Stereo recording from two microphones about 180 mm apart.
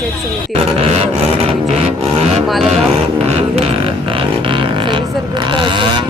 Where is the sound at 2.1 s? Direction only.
35° right (ahead or behind).